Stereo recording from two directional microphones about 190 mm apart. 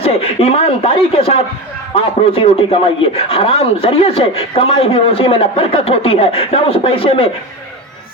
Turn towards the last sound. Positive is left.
turn(degrees=30)  # may be behind; listen again after turning